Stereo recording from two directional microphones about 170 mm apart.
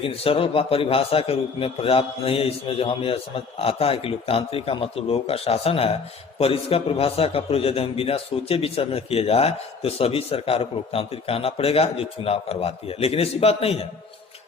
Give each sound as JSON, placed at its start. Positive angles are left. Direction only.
{"t": 0.0, "sound": "a man's voice", "side_deg": 35}